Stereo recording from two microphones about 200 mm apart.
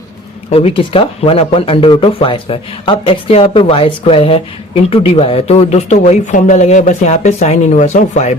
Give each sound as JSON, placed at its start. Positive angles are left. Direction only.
{"t": 0.5, "sound": "speech", "side_deg": 30}